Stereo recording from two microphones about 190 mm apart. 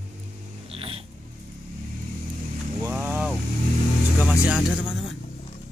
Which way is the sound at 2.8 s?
10° right (ahead or behind).